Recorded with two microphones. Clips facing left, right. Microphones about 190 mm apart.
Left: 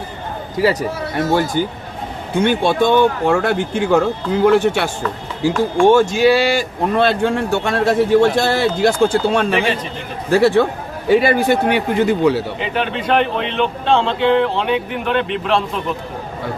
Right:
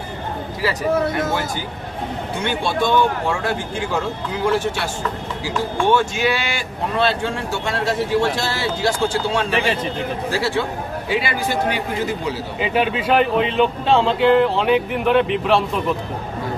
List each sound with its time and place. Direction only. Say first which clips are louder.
2.4 s a man's voice: left 7 dB; 55° left (ahead or behind)
5.8 s speech: left 7 dB; 45° left (ahead or behind)
6.9 s a man's voice: left 5 dB; 55° left (ahead or behind)
12.5 s speech: right 1 dB; 5° right (ahead or behind)